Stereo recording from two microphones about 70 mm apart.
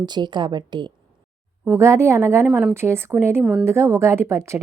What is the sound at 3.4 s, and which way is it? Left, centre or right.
Speech, centre.